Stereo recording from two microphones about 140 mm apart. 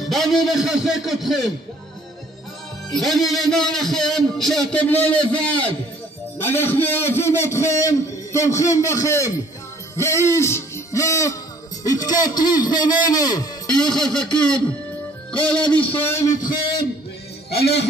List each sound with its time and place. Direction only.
0.1 s a man's voice: centre (ahead or behind)
2.9 s a man's voice: centre (ahead or behind); by 9.3 s 20° left (ahead or behind)
9.9 s hoot: 20° left (ahead or behind)
11.8 s a man's voice: 25° left (ahead or behind)
13.7 s a man's voice: 5° left (ahead or behind); by 16.8 s 35° left (ahead or behind)